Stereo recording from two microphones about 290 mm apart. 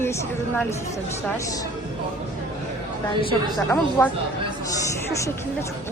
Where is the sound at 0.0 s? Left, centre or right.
Centre.